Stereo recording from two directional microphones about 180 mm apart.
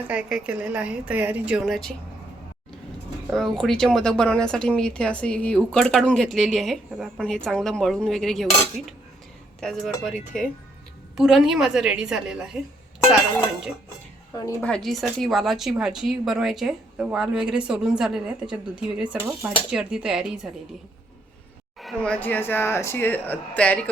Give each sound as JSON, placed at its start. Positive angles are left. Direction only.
{"t": 0.1, "sound": "a woman's voice", "side_deg": -5}
{"t": 3.2, "sound": "speech", "side_deg": 0}
{"t": 9.6, "sound": "speech", "side_deg": 0}
{"t": 14.3, "sound": "speech", "side_deg": 15}
{"t": 14.7, "sound": "speech", "side_deg": 0}
{"t": 21.8, "sound": "speech", "side_deg": 5}